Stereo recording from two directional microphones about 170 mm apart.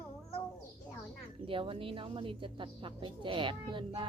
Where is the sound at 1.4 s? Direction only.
30° right (ahead or behind).